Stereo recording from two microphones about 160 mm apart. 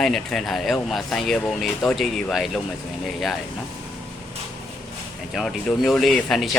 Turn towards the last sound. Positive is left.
turn(degrees=0)  # may be behind; listen again after turning